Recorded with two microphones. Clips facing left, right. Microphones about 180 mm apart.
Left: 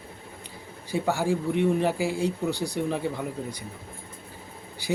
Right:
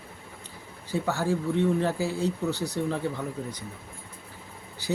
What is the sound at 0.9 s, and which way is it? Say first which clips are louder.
Speech: left 2 dB; 15° left (ahead or behind).